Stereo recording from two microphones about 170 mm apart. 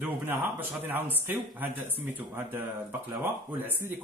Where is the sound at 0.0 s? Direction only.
10° right (ahead or behind).